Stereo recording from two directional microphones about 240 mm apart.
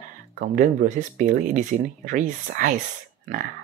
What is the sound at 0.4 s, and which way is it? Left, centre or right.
Speech, right.